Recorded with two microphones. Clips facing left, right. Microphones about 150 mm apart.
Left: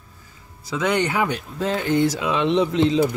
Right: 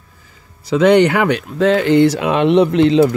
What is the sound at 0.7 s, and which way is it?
Speech, 70° right (ahead or behind).